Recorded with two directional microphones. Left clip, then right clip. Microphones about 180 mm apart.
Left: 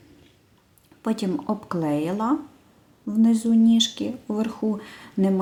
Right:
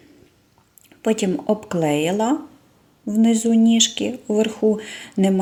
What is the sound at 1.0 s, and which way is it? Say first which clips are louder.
Speech: right 6 dB; 50° left (ahead or behind).